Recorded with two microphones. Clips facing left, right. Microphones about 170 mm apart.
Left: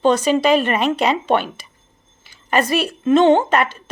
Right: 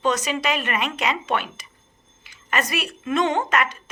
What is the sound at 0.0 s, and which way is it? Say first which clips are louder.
A woman's voice: left 8 dB; 30° left (ahead or behind).